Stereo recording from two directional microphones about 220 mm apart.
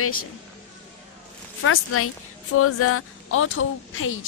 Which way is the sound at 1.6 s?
80° left.